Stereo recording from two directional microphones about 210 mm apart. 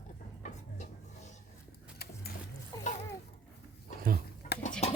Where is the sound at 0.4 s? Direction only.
35° left (ahead or behind).